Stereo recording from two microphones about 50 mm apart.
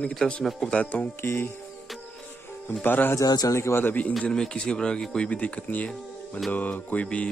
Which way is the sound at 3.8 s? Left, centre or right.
Left.